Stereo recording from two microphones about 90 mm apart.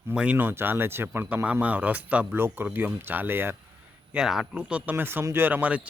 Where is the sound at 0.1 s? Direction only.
15° right (ahead or behind).